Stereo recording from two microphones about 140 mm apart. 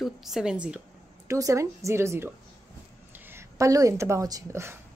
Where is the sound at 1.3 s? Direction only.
20° right (ahead or behind).